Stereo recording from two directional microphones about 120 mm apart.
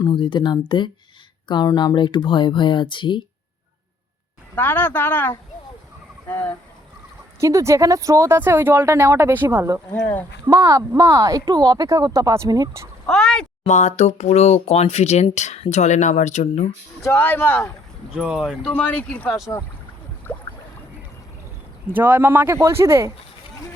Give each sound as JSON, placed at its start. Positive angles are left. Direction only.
{"t": 0.1, "sound": "speech", "side_deg": 40}
{"t": 4.5, "sound": "speech", "side_deg": 15}
{"t": 7.3, "sound": "speech", "side_deg": -25}
{"t": 13.1, "sound": "speech", "side_deg": 5}
{"t": 13.7, "sound": "speech", "side_deg": 85}
{"t": 17.0, "sound": "speech", "side_deg": 20}
{"t": 18.1, "sound": "speech", "side_deg": -5}
{"t": 18.7, "sound": "speech", "side_deg": 15}
{"t": 21.8, "sound": "speech", "side_deg": -15}